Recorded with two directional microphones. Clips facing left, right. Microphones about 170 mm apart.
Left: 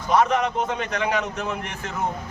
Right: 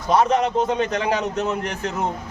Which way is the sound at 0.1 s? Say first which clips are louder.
Right 2 dB; 35° right (ahead or behind).